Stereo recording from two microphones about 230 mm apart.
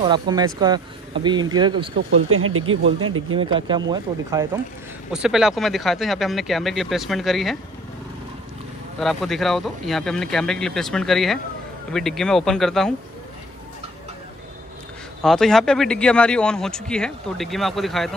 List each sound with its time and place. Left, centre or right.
0.0 s speech: centre
2.0 s speech: right
3.3 s speech: right
5.1 s speech: centre
9.0 s speech: centre
15.2 s speech: centre